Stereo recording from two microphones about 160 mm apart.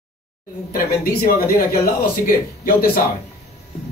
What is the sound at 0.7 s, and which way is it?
Speech, 70° left (ahead or behind).